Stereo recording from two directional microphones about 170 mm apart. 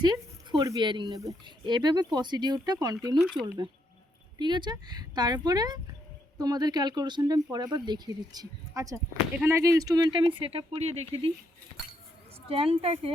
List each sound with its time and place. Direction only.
0.0 s speech: 25° right (ahead or behind)
3.2 s speech: centre (ahead or behind)
4.4 s speech: 25° right (ahead or behind)
12.5 s a woman's voice: 35° right (ahead or behind)